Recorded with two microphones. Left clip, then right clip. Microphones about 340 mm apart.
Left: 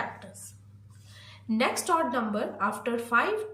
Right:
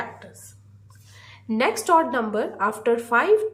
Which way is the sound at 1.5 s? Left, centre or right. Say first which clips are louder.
Right 6 dB; centre.